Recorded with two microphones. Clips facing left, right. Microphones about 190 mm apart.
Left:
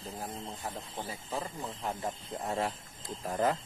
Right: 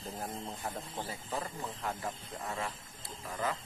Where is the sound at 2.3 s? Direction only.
30° left (ahead or behind).